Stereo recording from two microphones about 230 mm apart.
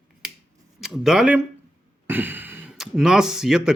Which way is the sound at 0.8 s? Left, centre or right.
Centre.